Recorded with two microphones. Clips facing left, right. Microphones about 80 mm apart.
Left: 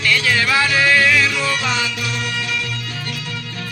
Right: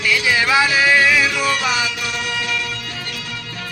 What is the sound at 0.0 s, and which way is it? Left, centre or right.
Music, centre.